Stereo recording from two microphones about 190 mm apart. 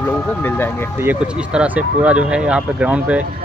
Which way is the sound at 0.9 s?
10° right (ahead or behind).